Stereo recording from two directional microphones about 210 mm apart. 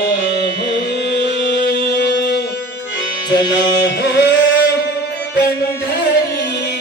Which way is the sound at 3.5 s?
55° left (ahead or behind).